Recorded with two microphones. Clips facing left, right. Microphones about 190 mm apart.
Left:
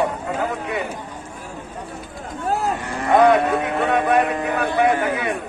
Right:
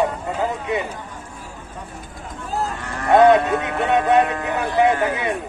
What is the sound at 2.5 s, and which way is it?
Cattle, 65° left (ahead or behind).